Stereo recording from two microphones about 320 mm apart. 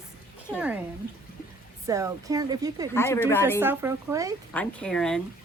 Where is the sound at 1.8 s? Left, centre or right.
Centre.